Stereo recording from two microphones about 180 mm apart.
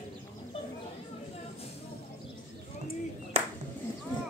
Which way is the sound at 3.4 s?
35° right (ahead or behind).